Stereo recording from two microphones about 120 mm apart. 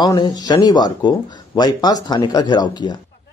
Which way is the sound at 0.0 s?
35° left (ahead or behind).